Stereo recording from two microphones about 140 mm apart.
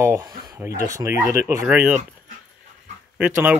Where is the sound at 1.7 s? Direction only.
10° right (ahead or behind).